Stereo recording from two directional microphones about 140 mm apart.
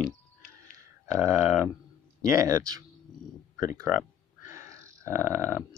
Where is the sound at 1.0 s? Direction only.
20° right (ahead or behind).